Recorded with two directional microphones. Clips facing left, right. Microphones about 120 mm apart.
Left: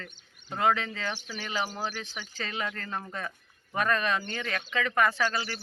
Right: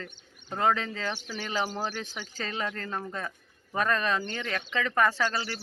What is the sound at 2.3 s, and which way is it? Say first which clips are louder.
Speech: right 1 dB; 35° right (ahead or behind).